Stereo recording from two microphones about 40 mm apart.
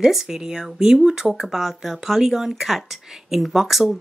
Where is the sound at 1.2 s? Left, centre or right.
Centre.